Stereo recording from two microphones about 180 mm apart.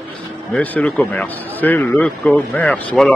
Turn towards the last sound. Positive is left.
turn(degrees=5)  # may be behind; listen again after turning